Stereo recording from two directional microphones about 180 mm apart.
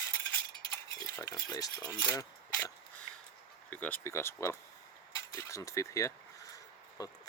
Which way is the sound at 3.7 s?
10° left (ahead or behind).